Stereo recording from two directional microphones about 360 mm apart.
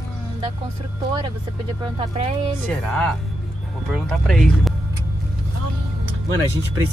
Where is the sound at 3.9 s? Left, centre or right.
Centre.